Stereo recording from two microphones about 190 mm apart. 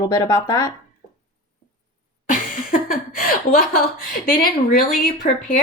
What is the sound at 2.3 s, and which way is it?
Speech, 45° left (ahead or behind).